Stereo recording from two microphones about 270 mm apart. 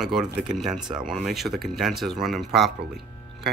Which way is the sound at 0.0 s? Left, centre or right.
Centre.